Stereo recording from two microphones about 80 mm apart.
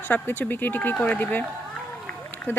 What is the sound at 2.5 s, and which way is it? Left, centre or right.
Speech, left.